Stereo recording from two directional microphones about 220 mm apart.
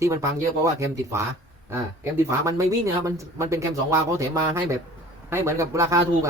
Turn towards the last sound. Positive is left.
turn(degrees=-10)  # may be behind; listen again after turning